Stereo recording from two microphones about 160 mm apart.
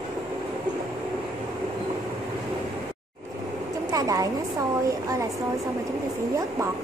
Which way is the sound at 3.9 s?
20° right (ahead or behind).